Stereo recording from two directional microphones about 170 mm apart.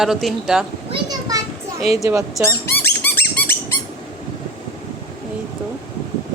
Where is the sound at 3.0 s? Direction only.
10° left (ahead or behind).